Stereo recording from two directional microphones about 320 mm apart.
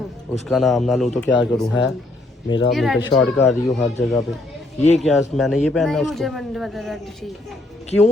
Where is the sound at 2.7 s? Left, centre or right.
Centre.